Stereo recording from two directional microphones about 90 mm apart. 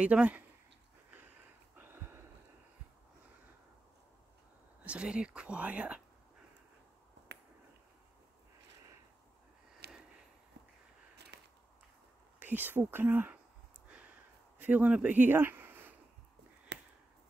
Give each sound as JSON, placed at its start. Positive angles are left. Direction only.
{"t": 0.0, "sound": "speech", "side_deg": -15}
{"t": 1.8, "sound": "a sound", "side_deg": -25}
{"t": 4.8, "sound": "speech", "side_deg": -10}
{"t": 12.4, "sound": "speech", "side_deg": -20}
{"t": 13.8, "sound": "a sound", "side_deg": -15}
{"t": 14.6, "sound": "speech", "side_deg": -15}